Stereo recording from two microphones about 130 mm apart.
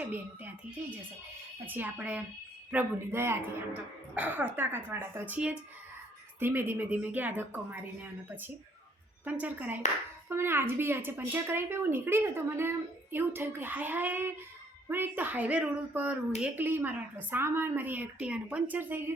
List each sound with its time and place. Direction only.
0.0 s a woman's voice: 15° right (ahead or behind)
9.2 s a woman's voice: 10° right (ahead or behind)